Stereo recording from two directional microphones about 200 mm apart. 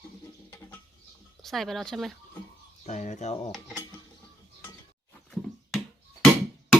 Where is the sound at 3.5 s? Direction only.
Centre (ahead or behind).